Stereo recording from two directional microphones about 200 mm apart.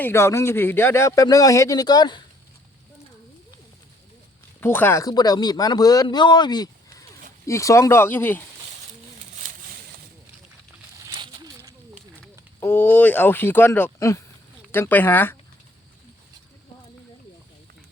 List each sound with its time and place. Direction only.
0.0 s speech: 15° left (ahead or behind)
4.6 s speech: 10° left (ahead or behind)
11.2 s a sound: 20° right (ahead or behind)
12.5 s speech: 10° left (ahead or behind)